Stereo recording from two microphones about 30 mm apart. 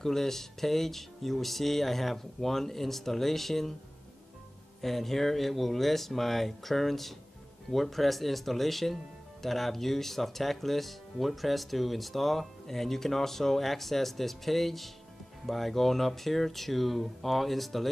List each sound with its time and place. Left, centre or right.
0.0 s speech: centre
4.8 s speech: centre